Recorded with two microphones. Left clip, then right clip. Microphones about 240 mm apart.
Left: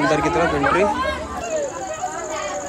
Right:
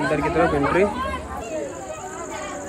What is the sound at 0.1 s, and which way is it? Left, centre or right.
Speech, centre.